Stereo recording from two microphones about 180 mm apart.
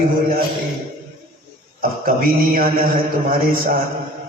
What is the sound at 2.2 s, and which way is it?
Mantra, 50° right (ahead or behind).